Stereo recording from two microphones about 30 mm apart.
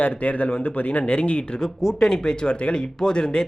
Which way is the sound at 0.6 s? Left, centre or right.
Left.